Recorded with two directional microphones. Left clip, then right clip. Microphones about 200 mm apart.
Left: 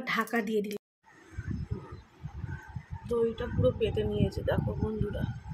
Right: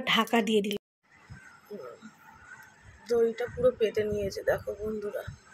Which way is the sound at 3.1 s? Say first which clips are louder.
Right 3 dB; 5° right (ahead or behind).